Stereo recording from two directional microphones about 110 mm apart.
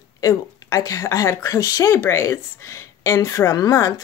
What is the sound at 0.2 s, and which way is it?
A woman's voice, 30° left (ahead or behind).